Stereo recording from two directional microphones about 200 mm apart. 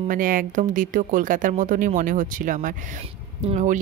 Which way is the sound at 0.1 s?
45° right (ahead or behind).